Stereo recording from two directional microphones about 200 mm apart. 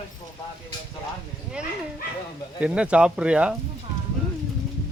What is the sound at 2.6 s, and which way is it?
Speech, 5° right (ahead or behind).